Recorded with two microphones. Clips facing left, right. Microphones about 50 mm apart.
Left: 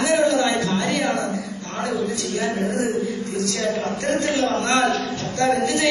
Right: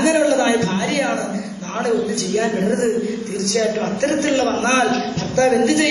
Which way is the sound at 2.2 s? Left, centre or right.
Right.